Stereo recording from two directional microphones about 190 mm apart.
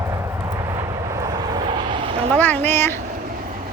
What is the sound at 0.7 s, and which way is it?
Vehicle, 20° right (ahead or behind).